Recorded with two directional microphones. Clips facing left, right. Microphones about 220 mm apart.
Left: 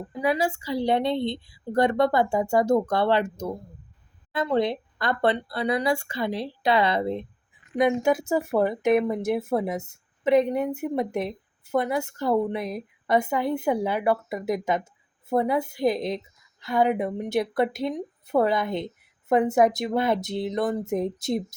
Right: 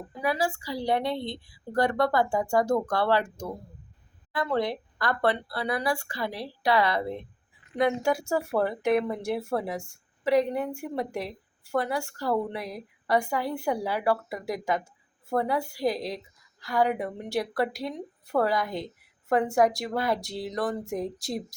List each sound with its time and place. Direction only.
0.2 s speech: 20° left (ahead or behind)